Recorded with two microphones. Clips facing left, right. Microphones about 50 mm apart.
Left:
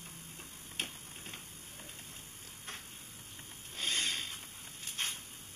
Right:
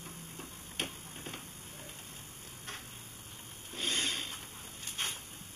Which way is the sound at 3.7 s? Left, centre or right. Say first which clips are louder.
Right 1 dB; right.